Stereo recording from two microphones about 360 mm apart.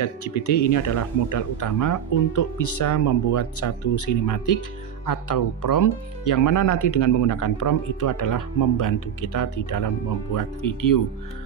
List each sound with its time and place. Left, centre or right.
0.0 s speech: left